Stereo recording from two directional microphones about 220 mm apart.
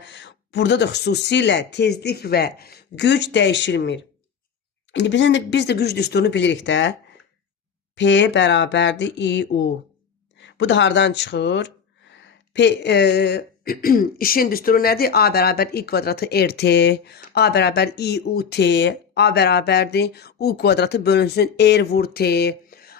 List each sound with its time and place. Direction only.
0.0 s speech: 55° left (ahead or behind)
7.9 s speech: 55° left (ahead or behind)